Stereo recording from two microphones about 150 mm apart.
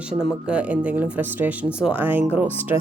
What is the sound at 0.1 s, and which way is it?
A woman's voice, 5° right (ahead or behind).